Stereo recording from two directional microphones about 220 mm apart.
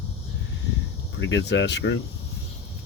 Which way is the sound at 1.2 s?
55° left (ahead or behind).